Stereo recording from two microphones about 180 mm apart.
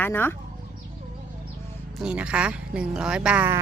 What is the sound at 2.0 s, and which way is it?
Speech, 5° right (ahead or behind).